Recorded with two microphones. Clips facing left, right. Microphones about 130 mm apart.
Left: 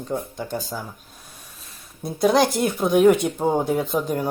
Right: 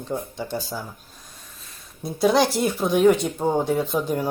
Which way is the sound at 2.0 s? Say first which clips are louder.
Left 1 dB; centre (ahead or behind).